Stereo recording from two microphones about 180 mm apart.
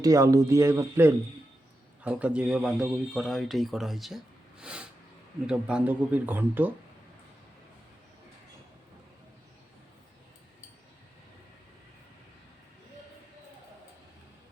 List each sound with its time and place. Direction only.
0.0 s a man's voice: 20° right (ahead or behind); by 4.2 s centre (ahead or behind)
4.6 s a sound: 5° right (ahead or behind)
5.5 s speech: 5° right (ahead or behind)